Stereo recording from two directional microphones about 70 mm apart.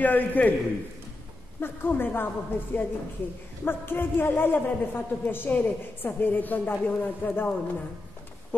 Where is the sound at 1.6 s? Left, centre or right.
Left.